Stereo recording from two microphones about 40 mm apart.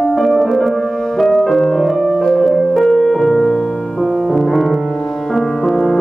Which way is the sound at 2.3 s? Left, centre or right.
Centre.